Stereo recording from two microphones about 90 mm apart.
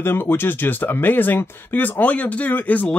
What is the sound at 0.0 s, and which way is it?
Speech, 25° left (ahead or behind).